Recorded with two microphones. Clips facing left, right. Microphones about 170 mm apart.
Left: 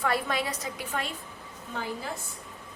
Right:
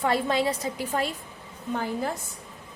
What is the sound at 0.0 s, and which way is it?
A woman's voice, 25° right (ahead or behind).